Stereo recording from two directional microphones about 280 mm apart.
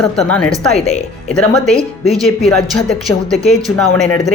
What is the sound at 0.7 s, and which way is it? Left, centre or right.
Speech, left.